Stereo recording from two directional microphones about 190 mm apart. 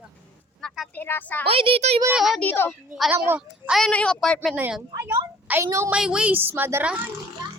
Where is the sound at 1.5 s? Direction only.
30° right (ahead or behind).